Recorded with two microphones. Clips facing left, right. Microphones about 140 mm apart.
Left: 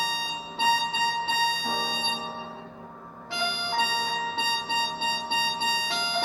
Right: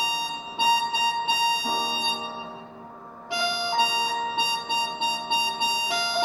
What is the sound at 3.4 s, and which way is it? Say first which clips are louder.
Music: right 3 dB; 15° right (ahead or behind).